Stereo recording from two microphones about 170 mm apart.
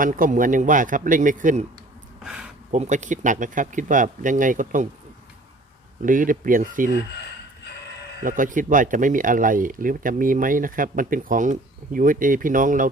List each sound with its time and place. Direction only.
0.0 s speech: 50° right (ahead or behind)
2.2 s a sound: 5° right (ahead or behind)
2.7 s speech: 45° right (ahead or behind)
6.0 s speech: 50° right (ahead or behind)
8.2 s speech: 50° right (ahead or behind)